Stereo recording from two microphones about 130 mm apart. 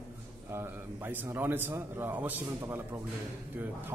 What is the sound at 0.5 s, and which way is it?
A man's voice, 20° right (ahead or behind).